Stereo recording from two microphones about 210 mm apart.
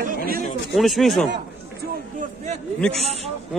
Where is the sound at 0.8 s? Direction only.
Centre (ahead or behind).